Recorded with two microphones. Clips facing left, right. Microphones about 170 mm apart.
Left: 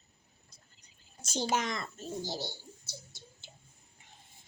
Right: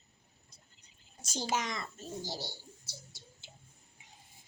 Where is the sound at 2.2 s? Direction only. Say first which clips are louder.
Left 4 dB; 20° left (ahead or behind).